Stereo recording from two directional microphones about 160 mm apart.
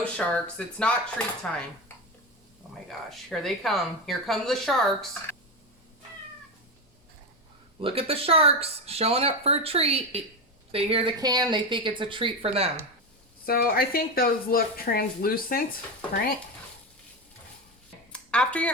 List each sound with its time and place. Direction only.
0.0 s speech: 5° left (ahead or behind)
3.1 s speech: centre (ahead or behind)
5.3 s a sound: 15° left (ahead or behind)
7.8 s speech: 35° right (ahead or behind)
11.2 s speech: 25° right (ahead or behind)
13.4 s speech: 70° left (ahead or behind)
18.1 s a sound: 5° left (ahead or behind)